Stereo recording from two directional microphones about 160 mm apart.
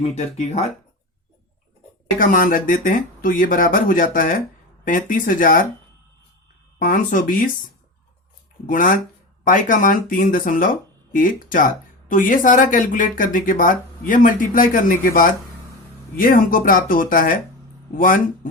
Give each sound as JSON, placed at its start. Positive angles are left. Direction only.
{"t": 0.0, "sound": "speech", "side_deg": 45}
{"t": 2.1, "sound": "speech", "side_deg": 60}
{"t": 6.7, "sound": "speech", "side_deg": 60}
{"t": 8.6, "sound": "speech", "side_deg": 55}